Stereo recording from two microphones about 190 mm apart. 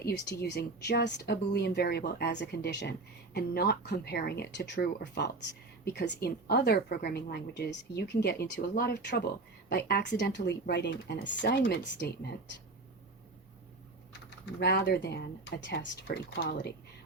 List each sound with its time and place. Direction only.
0.0 s a woman's voice: 60° left (ahead or behind)
14.1 s a woman's voice: 60° left (ahead or behind)